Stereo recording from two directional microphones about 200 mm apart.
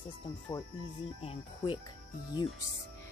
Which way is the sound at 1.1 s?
25° left (ahead or behind).